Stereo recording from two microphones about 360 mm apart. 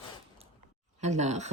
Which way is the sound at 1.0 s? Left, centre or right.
Centre.